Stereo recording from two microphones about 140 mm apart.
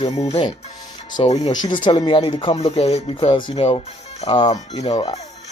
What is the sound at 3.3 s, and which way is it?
Speech, 35° left (ahead or behind).